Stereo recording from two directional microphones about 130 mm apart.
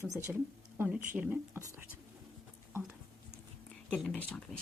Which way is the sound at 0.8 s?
15° right (ahead or behind).